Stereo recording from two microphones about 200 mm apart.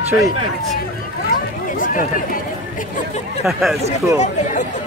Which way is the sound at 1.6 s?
40° left (ahead or behind).